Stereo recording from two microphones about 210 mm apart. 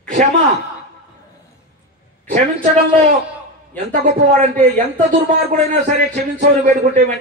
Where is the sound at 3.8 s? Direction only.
40° right (ahead or behind).